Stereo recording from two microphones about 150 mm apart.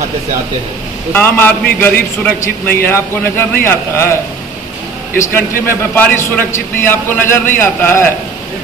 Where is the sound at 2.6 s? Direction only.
15° left (ahead or behind).